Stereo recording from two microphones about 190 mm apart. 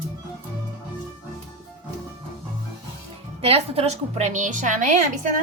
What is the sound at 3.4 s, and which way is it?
A woman's voice, 30° right (ahead or behind).